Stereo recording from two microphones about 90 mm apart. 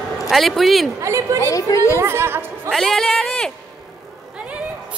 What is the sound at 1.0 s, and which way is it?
Speech, 35° right (ahead or behind).